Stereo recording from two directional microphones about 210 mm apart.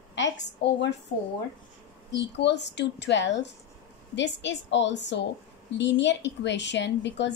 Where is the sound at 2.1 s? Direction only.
55° left (ahead or behind).